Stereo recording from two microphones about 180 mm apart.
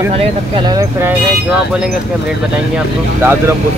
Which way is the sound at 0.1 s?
30° right (ahead or behind).